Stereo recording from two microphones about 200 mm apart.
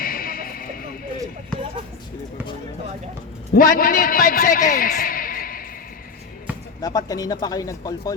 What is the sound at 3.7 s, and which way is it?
Speech, 45° left (ahead or behind).